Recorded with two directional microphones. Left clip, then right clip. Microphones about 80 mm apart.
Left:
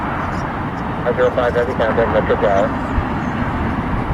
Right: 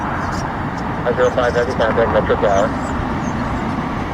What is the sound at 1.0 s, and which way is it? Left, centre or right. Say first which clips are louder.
Speech: even; centre.